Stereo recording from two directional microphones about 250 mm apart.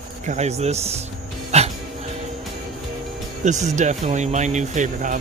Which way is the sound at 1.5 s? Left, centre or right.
Right.